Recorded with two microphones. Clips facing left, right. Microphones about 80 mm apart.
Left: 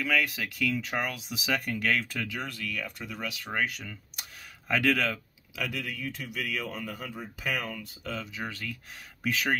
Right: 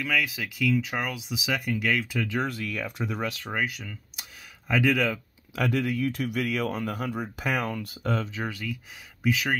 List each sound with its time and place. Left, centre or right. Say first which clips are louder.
0.0 s speech: even; centre
2.4 s speech: right 5 dB; right
3.5 s speech: right 1 dB; centre
5.6 s speech: right 8 dB; right
6.1 s speech: right 7 dB; right
8.2 s speech: right 5 dB; right
8.5 s speech: right 4 dB; centre
9.2 s speech: right 2 dB; centre